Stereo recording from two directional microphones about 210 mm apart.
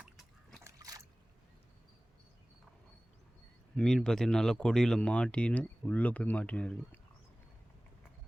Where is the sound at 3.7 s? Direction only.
5° left (ahead or behind).